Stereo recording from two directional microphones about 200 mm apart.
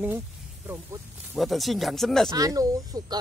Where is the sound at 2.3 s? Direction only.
15° right (ahead or behind).